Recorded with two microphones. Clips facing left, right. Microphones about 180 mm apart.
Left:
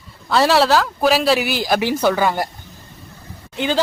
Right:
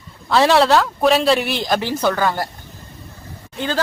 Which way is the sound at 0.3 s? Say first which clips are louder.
Right 1 dB; centre (ahead or behind).